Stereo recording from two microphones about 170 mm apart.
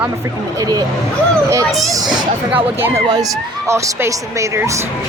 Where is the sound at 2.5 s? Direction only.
15° right (ahead or behind).